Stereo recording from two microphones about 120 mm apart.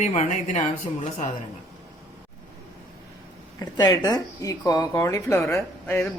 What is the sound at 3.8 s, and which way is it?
Speech, 35° left (ahead or behind).